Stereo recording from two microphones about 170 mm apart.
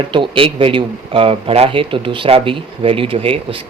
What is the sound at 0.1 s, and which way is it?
Speech, 30° right (ahead or behind).